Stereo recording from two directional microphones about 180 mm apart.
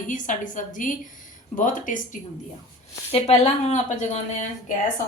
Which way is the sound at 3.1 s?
35° left (ahead or behind).